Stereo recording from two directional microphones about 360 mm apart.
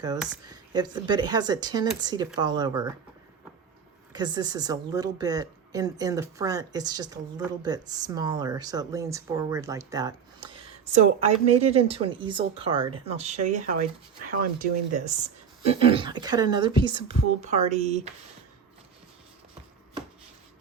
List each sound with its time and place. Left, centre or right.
0.0 s speech: centre
4.1 s speech: centre